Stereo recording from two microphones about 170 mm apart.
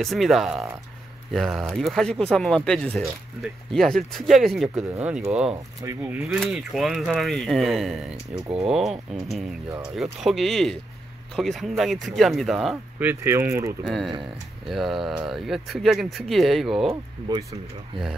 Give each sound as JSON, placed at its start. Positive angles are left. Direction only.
{"t": 0.0, "sound": "speech", "side_deg": 0}
{"t": 13.0, "sound": "speech", "side_deg": -15}
{"t": 13.8, "sound": "speech", "side_deg": 0}
{"t": 16.9, "sound": "speech", "side_deg": -20}